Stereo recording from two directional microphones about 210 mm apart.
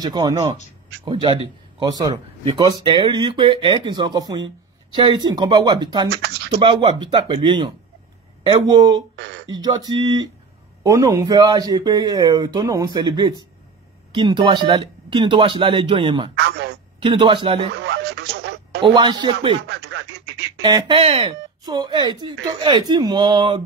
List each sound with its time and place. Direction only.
0.0 s a man's voice: 20° right (ahead or behind)
6.1 s speech: 55° right (ahead or behind)
6.5 s a man's voice: 25° right (ahead or behind)
9.1 s a sound: 55° right (ahead or behind)
9.6 s a man's voice: 20° right (ahead or behind)
16.3 s telephone: 55° right (ahead or behind)
17.0 s a man's voice: 25° right (ahead or behind)
17.8 s a sound: 55° right (ahead or behind)
18.8 s a man's voice: 20° right (ahead or behind)
19.6 s speech: 55° right (ahead or behind)
20.6 s a man's voice: 20° right (ahead or behind)